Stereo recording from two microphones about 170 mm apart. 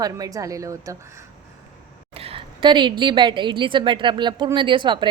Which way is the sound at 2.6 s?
30° right (ahead or behind).